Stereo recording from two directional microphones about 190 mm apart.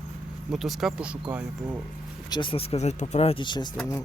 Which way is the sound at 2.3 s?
25° left (ahead or behind).